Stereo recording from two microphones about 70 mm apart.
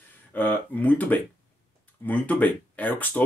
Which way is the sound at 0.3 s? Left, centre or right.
Left.